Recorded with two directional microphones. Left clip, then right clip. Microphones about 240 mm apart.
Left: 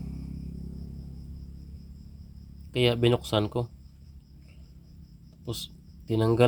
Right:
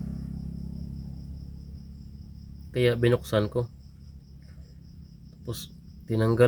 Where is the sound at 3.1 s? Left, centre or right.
Centre.